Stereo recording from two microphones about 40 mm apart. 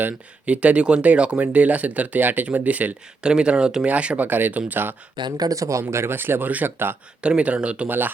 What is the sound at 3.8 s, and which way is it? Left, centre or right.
Speech, right.